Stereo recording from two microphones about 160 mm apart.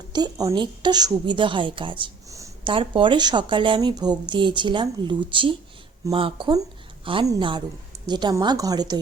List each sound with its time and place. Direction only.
0.1 s speech: 25° right (ahead or behind)